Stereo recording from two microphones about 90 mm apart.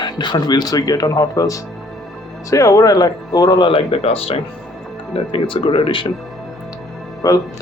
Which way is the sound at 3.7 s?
90° left.